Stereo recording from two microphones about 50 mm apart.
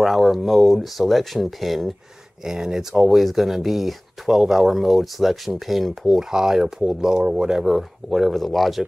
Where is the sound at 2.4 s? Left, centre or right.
Centre.